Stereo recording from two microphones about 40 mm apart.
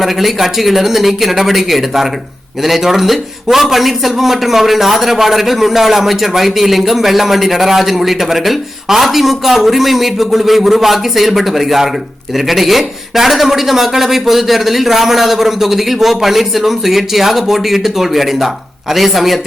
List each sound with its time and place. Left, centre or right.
0.0 s a man's voice: centre